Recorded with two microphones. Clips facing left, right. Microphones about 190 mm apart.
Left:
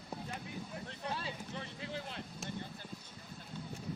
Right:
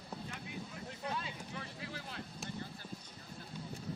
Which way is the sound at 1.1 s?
30° left (ahead or behind).